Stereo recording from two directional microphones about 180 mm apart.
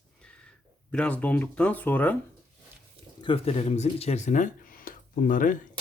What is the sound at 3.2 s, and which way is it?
Speech, 30° left (ahead or behind).